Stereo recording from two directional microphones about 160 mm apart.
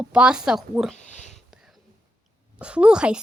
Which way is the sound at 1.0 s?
50° left (ahead or behind).